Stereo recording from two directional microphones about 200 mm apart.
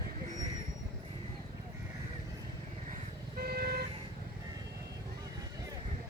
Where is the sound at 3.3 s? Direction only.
50° right (ahead or behind).